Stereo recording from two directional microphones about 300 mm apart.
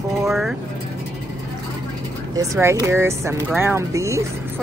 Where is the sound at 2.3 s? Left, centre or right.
Centre.